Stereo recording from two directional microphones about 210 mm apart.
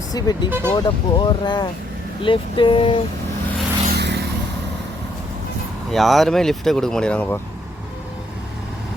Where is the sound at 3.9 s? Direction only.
55° right (ahead or behind).